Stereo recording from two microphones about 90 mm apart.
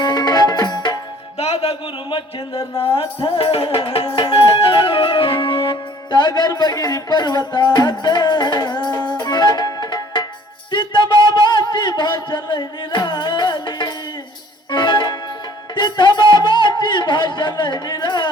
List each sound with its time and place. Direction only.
0.0 s music: 50° left (ahead or behind)
1.5 s music: 80° left; by 10.2 s 55° left (ahead or behind)
10.7 s a sound: 65° left (ahead or behind)
14.7 s music: 55° left (ahead or behind)